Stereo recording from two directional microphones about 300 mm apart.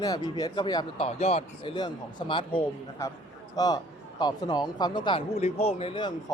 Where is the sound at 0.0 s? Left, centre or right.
Centre.